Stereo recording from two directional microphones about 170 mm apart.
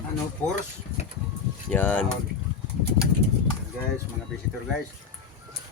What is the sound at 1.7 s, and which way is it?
Speech, 10° left (ahead or behind).